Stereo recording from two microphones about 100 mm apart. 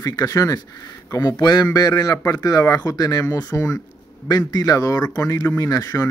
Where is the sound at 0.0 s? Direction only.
35° left (ahead or behind).